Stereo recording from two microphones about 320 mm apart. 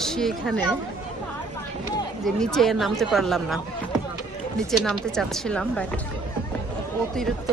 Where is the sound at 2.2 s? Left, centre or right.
Centre.